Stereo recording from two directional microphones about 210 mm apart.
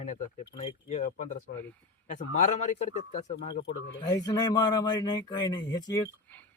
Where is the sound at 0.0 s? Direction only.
30° left (ahead or behind).